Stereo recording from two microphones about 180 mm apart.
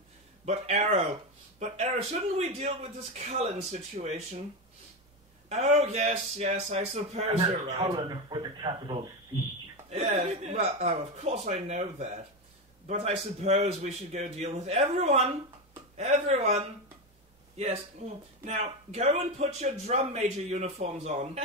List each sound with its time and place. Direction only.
0.5 s speech: 35° right (ahead or behind)
5.5 s speech: 35° right (ahead or behind)